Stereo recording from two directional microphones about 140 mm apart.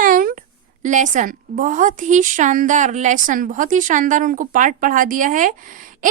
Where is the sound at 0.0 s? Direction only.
80° right.